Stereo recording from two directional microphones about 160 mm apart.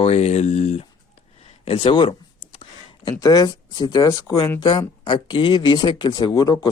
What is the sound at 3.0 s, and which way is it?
Speech, 25° left (ahead or behind).